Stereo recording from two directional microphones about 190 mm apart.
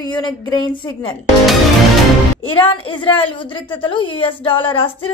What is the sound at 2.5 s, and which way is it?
A woman's voice, 25° left (ahead or behind).